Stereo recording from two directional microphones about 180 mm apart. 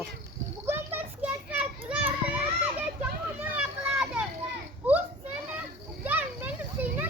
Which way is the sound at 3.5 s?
5° right (ahead or behind).